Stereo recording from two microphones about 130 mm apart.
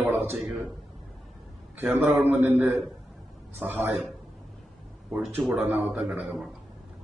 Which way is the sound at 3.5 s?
15° right (ahead or behind).